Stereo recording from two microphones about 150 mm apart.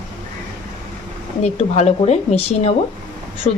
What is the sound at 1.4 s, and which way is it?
Speech, 45° left (ahead or behind).